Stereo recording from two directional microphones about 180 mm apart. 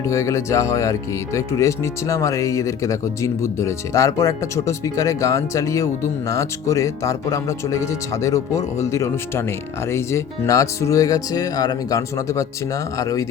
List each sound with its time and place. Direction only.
0.1 s speech: 15° left (ahead or behind)